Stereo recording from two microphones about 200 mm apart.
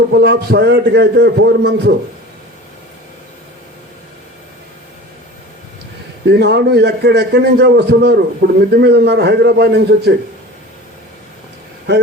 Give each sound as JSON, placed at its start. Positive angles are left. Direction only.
{"t": 0.2, "sound": "a man's voice", "side_deg": -55}
{"t": 6.2, "sound": "a man's voice", "side_deg": -55}